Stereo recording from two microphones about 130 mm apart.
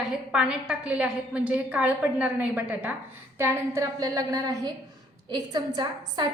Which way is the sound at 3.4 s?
25° right (ahead or behind).